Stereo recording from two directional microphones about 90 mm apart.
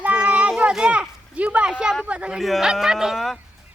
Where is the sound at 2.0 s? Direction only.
15° right (ahead or behind).